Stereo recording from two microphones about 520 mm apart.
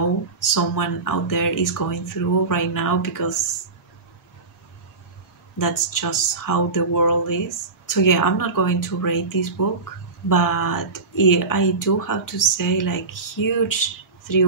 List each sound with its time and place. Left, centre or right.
0.6 s speech: left
5.6 s speech: left